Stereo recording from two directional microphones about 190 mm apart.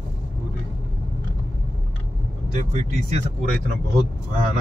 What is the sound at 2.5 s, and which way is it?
Speech, 40° right (ahead or behind).